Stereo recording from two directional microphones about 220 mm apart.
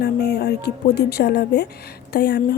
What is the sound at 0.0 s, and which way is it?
Speech, 45° left (ahead or behind).